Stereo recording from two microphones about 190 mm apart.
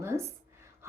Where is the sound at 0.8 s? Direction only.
15° right (ahead or behind).